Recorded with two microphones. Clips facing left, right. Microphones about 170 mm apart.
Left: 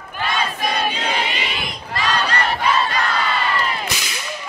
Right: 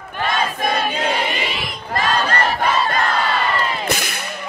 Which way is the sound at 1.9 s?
50° right (ahead or behind).